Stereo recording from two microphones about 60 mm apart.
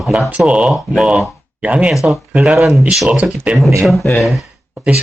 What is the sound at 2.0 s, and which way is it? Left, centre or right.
Speech, centre.